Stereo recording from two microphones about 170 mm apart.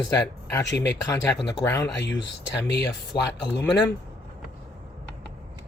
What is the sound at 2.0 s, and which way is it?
Speech, 90° left.